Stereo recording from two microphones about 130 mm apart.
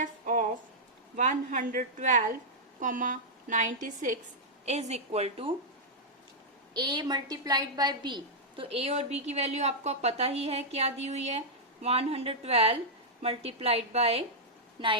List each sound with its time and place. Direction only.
0.0 s a sound: 90° right
1.1 s a woman's voice: 70° right (ahead or behind)
2.8 s a woman's voice: 90° right
4.6 s a woman's voice: 60° right (ahead or behind)
6.7 s a woman's voice: 35° right (ahead or behind); by 14.3 s 50° right (ahead or behind)
14.8 s a woman's voice: 40° right (ahead or behind)